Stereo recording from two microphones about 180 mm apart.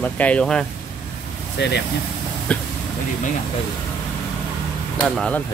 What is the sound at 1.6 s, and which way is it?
Speech, 70° left (ahead or behind).